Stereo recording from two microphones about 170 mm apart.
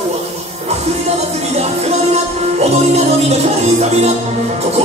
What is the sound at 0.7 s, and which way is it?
Music, 40° right (ahead or behind).